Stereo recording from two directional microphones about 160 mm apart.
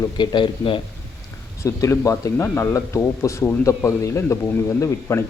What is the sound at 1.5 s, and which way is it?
Speech, 20° left (ahead or behind).